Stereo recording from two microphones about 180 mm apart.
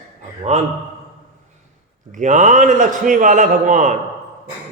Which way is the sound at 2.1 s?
45° right (ahead or behind).